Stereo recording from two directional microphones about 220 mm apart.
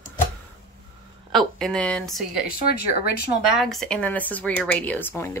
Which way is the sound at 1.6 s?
5° left (ahead or behind).